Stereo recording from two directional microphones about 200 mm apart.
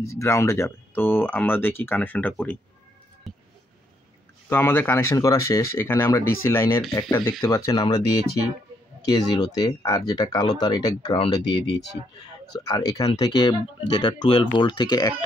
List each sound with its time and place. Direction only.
0.0 s speech: 15° left (ahead or behind)
3.3 s a sound: centre (ahead or behind)
4.5 s speech: 10° left (ahead or behind)
9.0 s speech: 20° left (ahead or behind)